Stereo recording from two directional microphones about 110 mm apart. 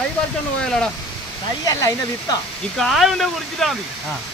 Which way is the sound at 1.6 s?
30° left (ahead or behind).